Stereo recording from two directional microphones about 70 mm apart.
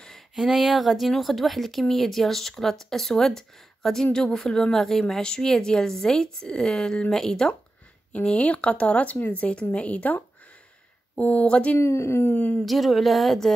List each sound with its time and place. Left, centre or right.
0.4 s speech: centre
11.8 s speech: left
12.3 s speech: left
12.6 s speech: centre